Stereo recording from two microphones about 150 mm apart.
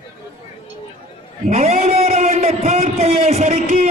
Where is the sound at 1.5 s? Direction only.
50° right (ahead or behind).